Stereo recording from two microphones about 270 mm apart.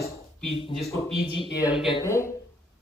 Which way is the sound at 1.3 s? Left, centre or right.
Centre.